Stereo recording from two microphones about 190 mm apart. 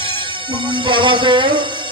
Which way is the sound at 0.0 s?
25° right (ahead or behind).